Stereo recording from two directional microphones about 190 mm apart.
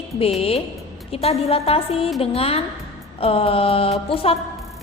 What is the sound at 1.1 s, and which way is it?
A woman's voice, 30° left (ahead or behind).